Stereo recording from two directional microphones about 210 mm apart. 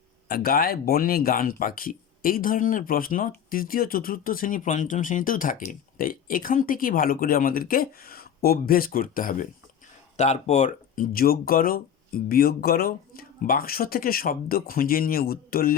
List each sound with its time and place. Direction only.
0.3 s speech: 45° left (ahead or behind)